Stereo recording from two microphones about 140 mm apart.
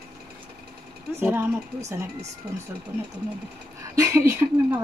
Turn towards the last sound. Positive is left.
turn(degrees=-20)  # may be behind; listen again after turning